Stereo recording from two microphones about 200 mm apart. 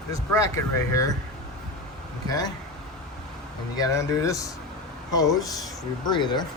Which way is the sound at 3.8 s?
15° left (ahead or behind).